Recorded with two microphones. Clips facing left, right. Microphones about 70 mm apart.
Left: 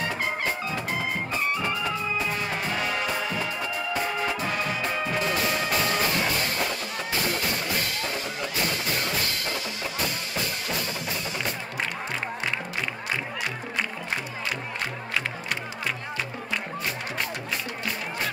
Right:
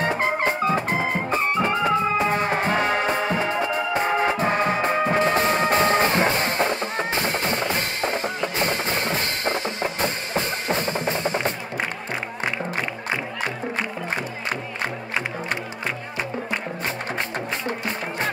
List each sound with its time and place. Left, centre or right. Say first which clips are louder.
0.0 s music: right 6 dB; right
17.6 s music: right 5 dB; right